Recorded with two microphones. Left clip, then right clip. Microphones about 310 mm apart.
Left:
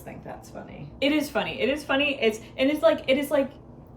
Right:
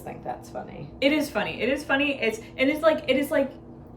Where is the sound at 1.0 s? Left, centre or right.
Centre.